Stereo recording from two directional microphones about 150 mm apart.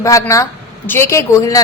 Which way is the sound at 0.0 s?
20° left (ahead or behind).